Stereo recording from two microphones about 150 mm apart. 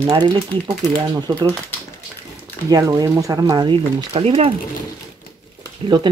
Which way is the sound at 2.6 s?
25° right (ahead or behind).